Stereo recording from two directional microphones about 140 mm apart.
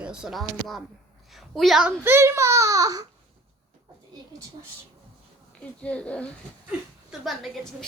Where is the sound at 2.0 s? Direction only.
15° right (ahead or behind).